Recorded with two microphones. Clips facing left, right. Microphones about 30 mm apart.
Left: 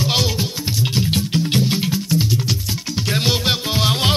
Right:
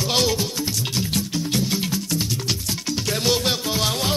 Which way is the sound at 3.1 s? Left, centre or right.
Left.